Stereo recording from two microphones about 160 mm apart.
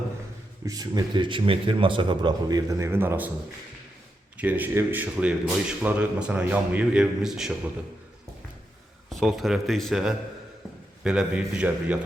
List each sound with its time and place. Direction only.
0.6 s a man's voice: 25° right (ahead or behind)
4.4 s speech: 10° right (ahead or behind)
9.0 s speech: centre (ahead or behind)